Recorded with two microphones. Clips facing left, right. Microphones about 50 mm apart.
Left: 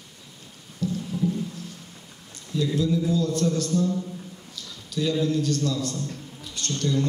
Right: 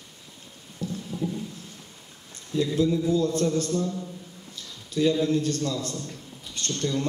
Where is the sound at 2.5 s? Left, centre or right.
Right.